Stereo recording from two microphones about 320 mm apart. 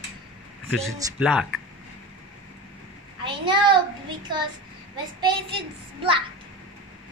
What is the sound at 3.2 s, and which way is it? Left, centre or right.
A child's voice, centre.